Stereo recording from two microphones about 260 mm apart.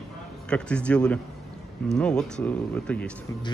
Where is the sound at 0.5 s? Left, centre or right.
Centre.